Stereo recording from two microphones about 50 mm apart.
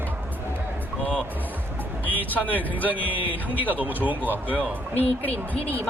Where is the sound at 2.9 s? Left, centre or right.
Right.